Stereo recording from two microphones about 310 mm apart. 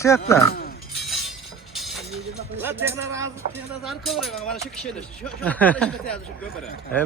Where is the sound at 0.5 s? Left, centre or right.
Left.